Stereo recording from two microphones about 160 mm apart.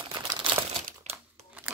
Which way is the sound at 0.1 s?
30° right (ahead or behind).